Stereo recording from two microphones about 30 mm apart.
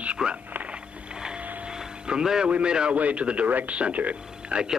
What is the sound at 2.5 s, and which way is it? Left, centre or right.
Speech, right.